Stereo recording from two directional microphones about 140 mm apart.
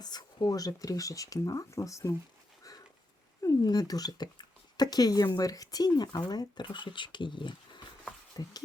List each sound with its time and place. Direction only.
0.0 s speech: 30° left (ahead or behind)
2.7 s a sound: 25° left (ahead or behind)
3.4 s speech: 25° left (ahead or behind)